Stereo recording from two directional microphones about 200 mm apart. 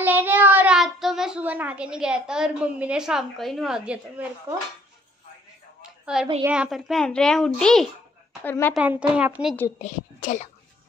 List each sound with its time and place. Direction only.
0.0 s a child's voice: 10° right (ahead or behind)
5.8 s a sound: 5° right (ahead or behind)
6.4 s a child's voice: 5° right (ahead or behind)
8.7 s a child's voice: 5° right (ahead or behind)
9.8 s a woman's voice: 35° left (ahead or behind)